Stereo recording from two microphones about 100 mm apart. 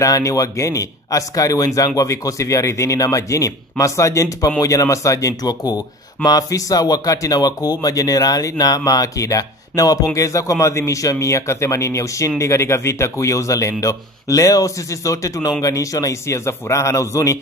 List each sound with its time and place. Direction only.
0.0 s speech: 35° left (ahead or behind)